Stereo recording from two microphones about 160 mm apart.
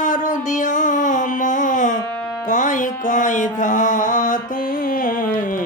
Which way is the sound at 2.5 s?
55° left (ahead or behind).